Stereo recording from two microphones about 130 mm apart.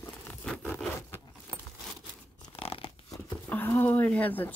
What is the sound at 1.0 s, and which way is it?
Keys jangling, 20° left (ahead or behind).